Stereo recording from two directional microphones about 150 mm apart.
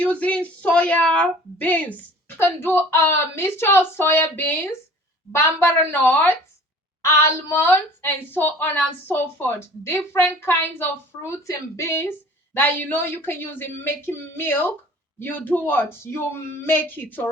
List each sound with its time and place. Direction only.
0.0 s a woman's voice: 10° left (ahead or behind)
5.8 s a woman's voice: 15° left (ahead or behind)